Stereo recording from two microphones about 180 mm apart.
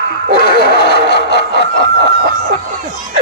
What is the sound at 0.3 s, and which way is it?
Snicker, 60° left (ahead or behind).